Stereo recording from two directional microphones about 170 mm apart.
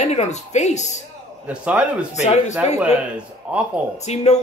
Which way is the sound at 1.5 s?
5° right (ahead or behind).